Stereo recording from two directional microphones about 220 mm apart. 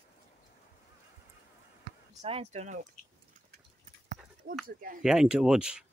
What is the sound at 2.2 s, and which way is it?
Speech, 30° right (ahead or behind).